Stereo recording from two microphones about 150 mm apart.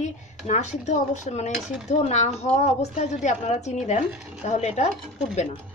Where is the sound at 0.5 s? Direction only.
50° left (ahead or behind).